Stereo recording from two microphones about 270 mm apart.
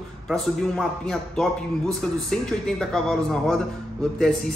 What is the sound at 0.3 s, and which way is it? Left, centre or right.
A man's voice, centre.